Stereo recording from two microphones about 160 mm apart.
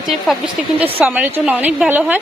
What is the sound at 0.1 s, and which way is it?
Speech, centre (ahead or behind).